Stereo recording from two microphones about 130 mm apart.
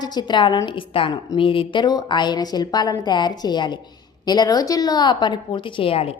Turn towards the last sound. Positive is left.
turn(degrees=50)  # may be behind; listen again after turning